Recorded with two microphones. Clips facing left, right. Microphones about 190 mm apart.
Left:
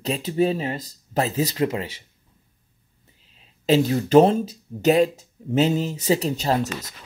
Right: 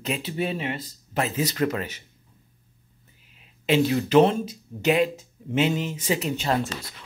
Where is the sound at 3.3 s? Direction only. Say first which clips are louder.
Left 3 dB; 40° left (ahead or behind).